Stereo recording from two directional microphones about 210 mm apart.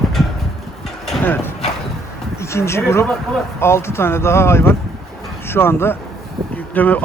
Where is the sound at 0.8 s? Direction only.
Centre (ahead or behind).